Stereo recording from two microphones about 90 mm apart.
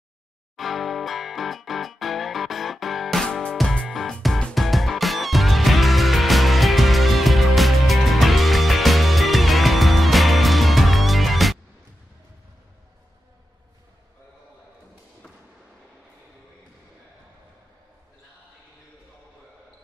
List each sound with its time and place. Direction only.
0.6 s music: centre (ahead or behind)